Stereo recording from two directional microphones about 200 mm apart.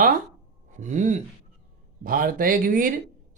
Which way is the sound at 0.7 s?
35° right (ahead or behind).